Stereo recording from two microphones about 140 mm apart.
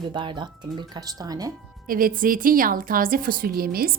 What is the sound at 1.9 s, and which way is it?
A woman's voice, 90° right.